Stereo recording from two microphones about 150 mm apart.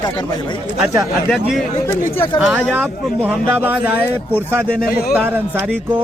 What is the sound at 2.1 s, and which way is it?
Speech, 40° left (ahead or behind).